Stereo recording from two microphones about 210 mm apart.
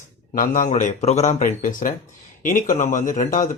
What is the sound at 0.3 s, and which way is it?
Speech, 40° left (ahead or behind).